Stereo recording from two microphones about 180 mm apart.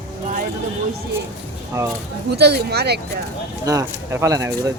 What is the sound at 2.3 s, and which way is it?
Speech, 65° right (ahead or behind).